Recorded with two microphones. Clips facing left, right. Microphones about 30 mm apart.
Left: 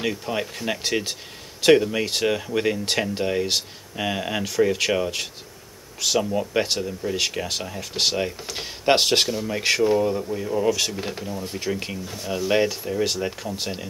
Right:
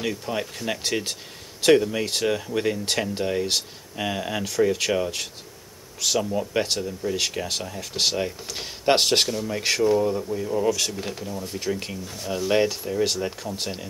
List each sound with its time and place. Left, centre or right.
0.0 s speech: centre